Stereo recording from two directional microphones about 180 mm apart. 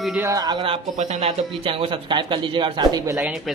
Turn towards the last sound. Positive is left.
turn(degrees=-20)  # may be behind; listen again after turning